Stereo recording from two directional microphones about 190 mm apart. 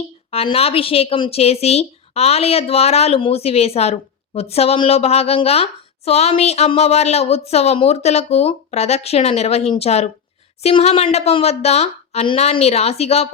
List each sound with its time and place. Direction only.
0.3 s a woman's voice: 30° left (ahead or behind)